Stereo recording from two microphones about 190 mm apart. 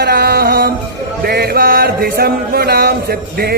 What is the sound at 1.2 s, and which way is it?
Chant, 55° right (ahead or behind).